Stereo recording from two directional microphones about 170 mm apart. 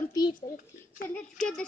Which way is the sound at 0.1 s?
25° left (ahead or behind).